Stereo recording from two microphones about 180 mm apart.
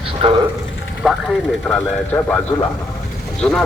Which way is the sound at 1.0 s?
Centre (ahead or behind).